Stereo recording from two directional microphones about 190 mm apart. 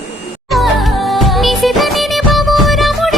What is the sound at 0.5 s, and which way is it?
Music of bollywood, centre (ahead or behind).